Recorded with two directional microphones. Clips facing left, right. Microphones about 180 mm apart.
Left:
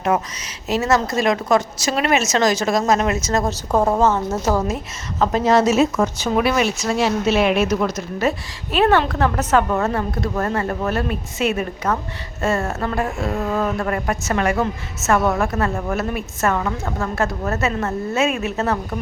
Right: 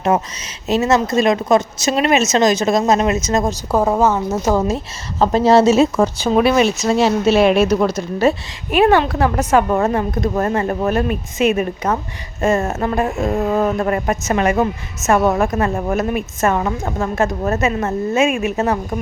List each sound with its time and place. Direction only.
0.0 s speech: 25° right (ahead or behind)
3.7 s a woman's voice: 5° right (ahead or behind)
5.2 s speech: 30° right (ahead or behind)
8.7 s a woman's voice: 10° right (ahead or behind)